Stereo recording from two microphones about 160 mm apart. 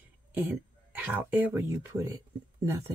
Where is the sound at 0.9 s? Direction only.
10° right (ahead or behind).